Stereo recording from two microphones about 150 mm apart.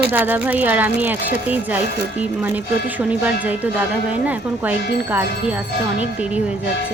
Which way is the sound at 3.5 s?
10° right (ahead or behind).